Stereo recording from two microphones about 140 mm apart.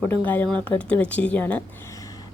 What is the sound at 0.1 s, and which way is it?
A woman's voice, 15° left (ahead or behind).